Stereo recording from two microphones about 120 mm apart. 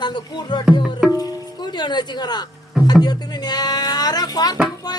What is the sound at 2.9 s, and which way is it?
Speech, 35° left (ahead or behind).